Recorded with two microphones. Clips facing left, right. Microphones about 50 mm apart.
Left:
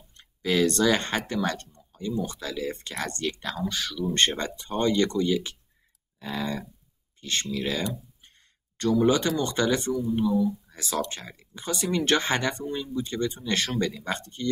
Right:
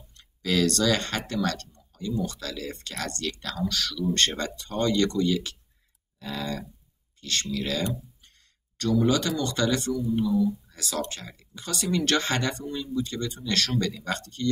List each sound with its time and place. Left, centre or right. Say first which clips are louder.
0.2 s speech: left 1 dB; left
8.9 s speech: left 1 dB; left
10.7 s speech: left 2 dB; left